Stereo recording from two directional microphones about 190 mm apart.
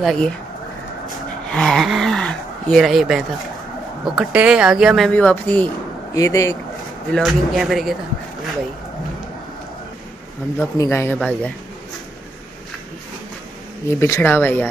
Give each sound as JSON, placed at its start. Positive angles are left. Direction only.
{"t": 0.0, "sound": "speech", "side_deg": 0}
{"t": 1.5, "sound": "speech", "side_deg": 0}
{"t": 7.1, "sound": "speech", "side_deg": 0}
{"t": 10.6, "sound": "speech", "side_deg": 15}
{"t": 13.8, "sound": "speech", "side_deg": 15}